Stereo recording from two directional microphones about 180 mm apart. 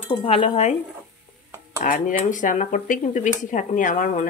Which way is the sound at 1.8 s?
45° left (ahead or behind).